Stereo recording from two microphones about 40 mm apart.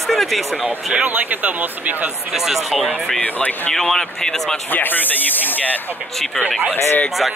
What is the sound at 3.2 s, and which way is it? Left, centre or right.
Speech, left.